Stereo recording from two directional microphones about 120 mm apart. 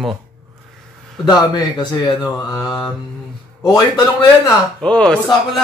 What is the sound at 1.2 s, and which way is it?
A man's voice, 35° left (ahead or behind).